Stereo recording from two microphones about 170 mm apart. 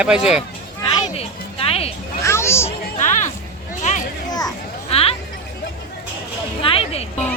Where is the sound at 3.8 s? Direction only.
45° left (ahead or behind).